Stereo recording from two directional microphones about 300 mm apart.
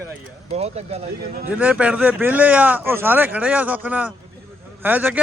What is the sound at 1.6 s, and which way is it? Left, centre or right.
Speech, centre.